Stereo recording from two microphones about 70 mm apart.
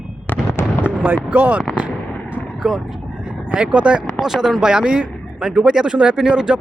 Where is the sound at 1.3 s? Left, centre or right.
Right.